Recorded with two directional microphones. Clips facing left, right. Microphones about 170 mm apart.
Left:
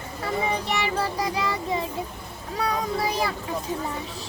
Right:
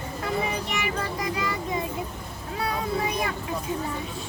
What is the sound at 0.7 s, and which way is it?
Music, 30° left (ahead or behind).